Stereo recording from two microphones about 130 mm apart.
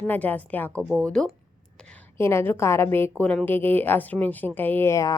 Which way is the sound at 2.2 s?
20° left (ahead or behind).